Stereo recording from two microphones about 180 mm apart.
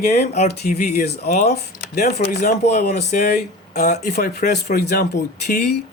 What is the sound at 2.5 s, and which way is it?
Speech, 55° left (ahead or behind).